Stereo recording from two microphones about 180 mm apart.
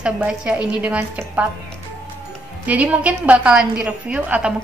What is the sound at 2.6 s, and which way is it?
A woman's voice, 10° right (ahead or behind).